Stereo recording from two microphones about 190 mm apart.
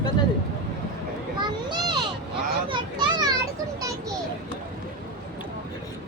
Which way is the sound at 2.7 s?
25° right (ahead or behind).